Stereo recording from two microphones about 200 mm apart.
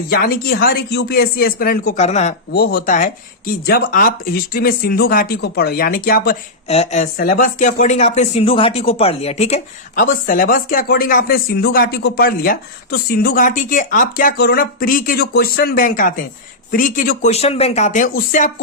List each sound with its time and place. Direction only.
0.1 s speech: 50° left (ahead or behind)
2.0 s speech: 35° left (ahead or behind)
2.5 s speech: 50° left (ahead or behind)
6.7 s speech: 35° left (ahead or behind)